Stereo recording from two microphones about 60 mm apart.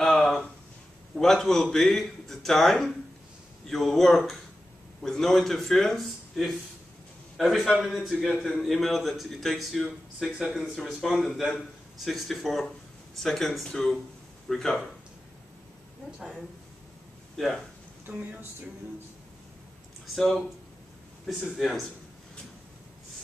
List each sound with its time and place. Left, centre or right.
0.0 s a sound: centre
1.1 s a man's voice: centre
16.2 s a man's voice: centre
18.0 s speech: right
20.2 s a man's voice: centre